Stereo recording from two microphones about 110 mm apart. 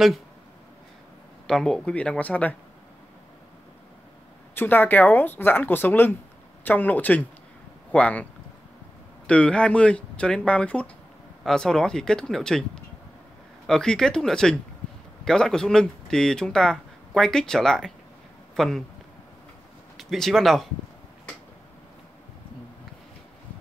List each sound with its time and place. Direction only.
1.5 s speech: 5° left (ahead or behind)
4.6 s speech: 15° left (ahead or behind)
9.3 s speech: 10° left (ahead or behind)
20.0 s speech: centre (ahead or behind)